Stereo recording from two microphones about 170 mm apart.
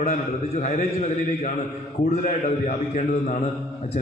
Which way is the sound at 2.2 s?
50° left (ahead or behind).